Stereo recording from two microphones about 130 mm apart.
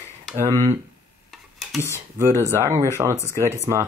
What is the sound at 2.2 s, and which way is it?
Speech, 20° right (ahead or behind).